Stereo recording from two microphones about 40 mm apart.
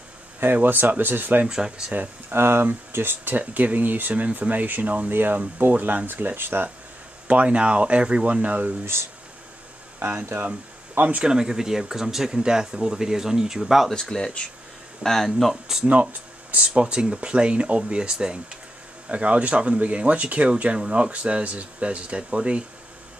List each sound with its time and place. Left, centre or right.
0.7 s speech: right
1.5 s speech: centre
2.3 s speech: right
3.3 s speech: right
5.1 s speech: right
5.7 s speech: right
6.3 s speech: right
7.2 s speech: right
9.9 s speech: right
11.2 s speech: centre
13.8 s speech: centre
15.9 s speech: right
16.8 s speech: right
19.0 s speech: right